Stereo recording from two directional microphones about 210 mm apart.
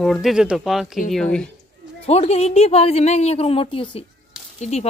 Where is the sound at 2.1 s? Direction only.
30° left (ahead or behind).